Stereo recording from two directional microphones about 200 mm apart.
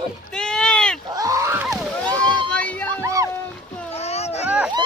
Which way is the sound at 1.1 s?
15° right (ahead or behind).